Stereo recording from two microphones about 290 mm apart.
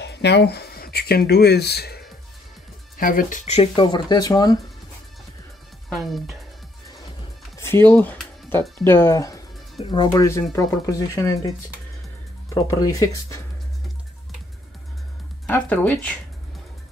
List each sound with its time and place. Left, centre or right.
0.0 s speech: left
3.0 s speech: left; by 4.6 s centre
5.9 s speech: centre
7.5 s speech: centre
12.5 s speech: centre
15.4 s speech: centre